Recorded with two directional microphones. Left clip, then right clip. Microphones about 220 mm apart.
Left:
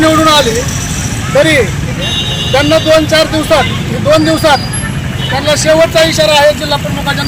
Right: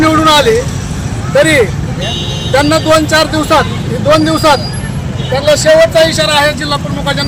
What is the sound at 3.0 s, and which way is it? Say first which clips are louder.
Speech: left 1 dB; centre (ahead or behind).